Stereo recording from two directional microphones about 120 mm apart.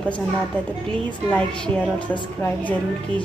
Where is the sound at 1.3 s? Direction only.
10° left (ahead or behind).